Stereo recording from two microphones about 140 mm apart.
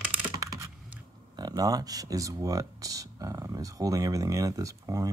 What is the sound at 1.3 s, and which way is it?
Speech, 30° right (ahead or behind).